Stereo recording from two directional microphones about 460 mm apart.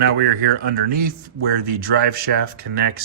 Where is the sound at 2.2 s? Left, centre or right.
Centre.